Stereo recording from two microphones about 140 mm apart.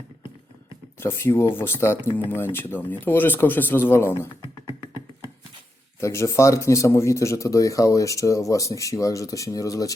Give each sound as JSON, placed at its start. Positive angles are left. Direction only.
{"t": 0.9, "sound": "speech", "side_deg": 15}
{"t": 6.0, "sound": "speech", "side_deg": 20}